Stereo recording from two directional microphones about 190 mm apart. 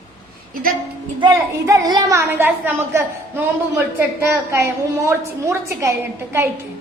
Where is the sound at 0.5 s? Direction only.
50° right (ahead or behind).